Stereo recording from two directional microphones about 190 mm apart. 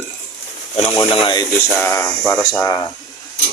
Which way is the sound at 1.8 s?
10° left (ahead or behind).